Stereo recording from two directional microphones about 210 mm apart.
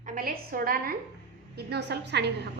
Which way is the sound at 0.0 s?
40° right (ahead or behind).